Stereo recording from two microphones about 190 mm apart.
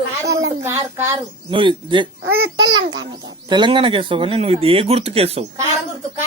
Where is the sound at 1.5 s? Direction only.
25° right (ahead or behind).